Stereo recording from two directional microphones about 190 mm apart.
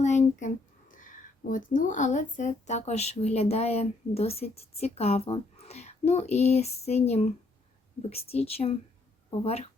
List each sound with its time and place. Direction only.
0.0 s speech: 40° left (ahead or behind)